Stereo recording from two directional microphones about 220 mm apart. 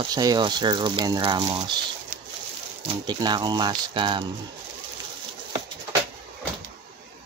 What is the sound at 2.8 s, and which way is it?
Speech, 20° right (ahead or behind).